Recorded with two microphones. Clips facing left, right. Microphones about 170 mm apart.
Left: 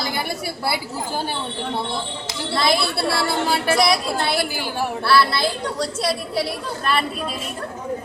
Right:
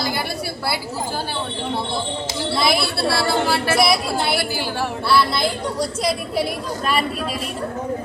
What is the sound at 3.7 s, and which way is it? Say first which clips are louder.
Speech: right 2 dB; 10° right (ahead or behind).